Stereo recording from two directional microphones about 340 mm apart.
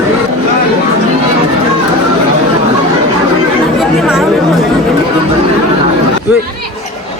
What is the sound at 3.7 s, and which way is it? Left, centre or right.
Chatter, centre.